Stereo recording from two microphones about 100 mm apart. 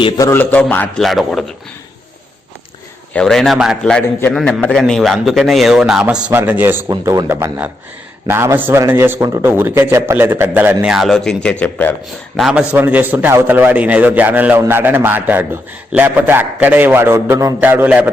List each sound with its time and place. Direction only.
0.3 s a man's voice: 15° left (ahead or behind)
0.9 s a man's voice: 5° left (ahead or behind)
3.1 s a man's voice: 10° left (ahead or behind)
4.3 s a man's voice: 10° left (ahead or behind); by 6.3 s 10° right (ahead or behind)
6.3 s a man's voice: 20° right (ahead or behind)
7.0 s a man's voice: 35° right (ahead or behind); by 10.8 s 20° right (ahead or behind)
10.8 s a man's voice: 5° right (ahead or behind); by 11.9 s 15° left (ahead or behind)
12.4 s a man's voice: 5° right (ahead or behind)
12.7 s a man's voice: 20° right (ahead or behind)